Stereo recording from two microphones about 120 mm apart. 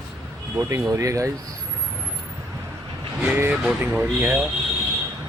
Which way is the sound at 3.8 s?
15° right (ahead or behind).